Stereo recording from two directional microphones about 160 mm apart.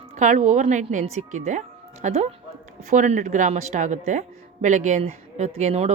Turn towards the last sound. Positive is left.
turn(degrees=-45)  # may be behind; listen again after turning